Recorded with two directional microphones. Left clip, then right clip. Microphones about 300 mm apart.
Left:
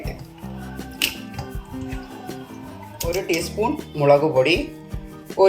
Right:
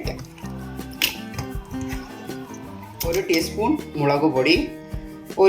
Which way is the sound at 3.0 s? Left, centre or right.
Centre.